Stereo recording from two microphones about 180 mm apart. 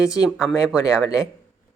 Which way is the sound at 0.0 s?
20° left (ahead or behind).